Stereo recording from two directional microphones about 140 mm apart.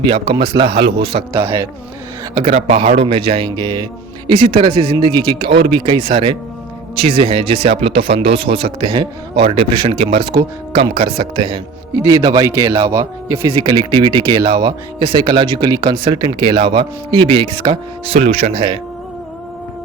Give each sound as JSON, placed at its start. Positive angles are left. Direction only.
{"t": 0.1, "sound": "speech", "side_deg": -35}
{"t": 2.3, "sound": "a man's voice", "side_deg": -45}